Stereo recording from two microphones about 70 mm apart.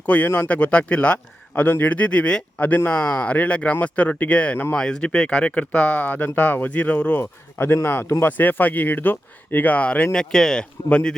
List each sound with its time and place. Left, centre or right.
0.0 s speech: left